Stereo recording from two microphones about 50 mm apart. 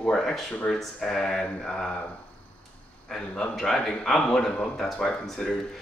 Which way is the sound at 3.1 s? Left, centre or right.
Centre.